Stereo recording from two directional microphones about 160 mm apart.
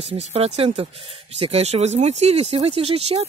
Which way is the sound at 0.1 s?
40° right (ahead or behind).